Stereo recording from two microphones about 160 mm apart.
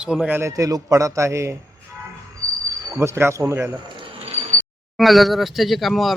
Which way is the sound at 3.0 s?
15° right (ahead or behind).